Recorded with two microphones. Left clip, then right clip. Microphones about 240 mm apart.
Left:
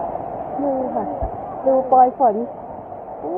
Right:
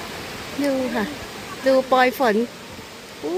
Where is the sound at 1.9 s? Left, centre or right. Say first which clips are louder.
Left 4 dB; right.